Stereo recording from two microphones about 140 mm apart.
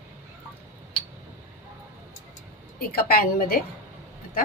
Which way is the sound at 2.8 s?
90° left.